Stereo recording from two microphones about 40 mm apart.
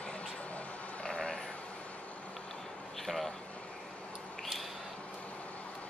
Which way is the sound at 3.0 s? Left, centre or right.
Centre.